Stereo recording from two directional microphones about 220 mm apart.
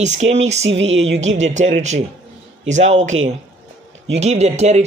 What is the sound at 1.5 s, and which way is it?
Speech, 30° right (ahead or behind).